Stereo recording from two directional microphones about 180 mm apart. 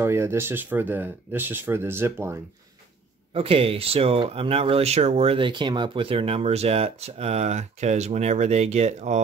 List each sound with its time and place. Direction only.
0.0 s speech: 15° right (ahead or behind)
3.3 s speech: 30° right (ahead or behind)